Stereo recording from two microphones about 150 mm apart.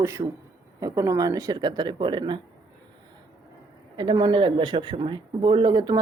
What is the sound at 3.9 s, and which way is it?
Speech, 30° right (ahead or behind).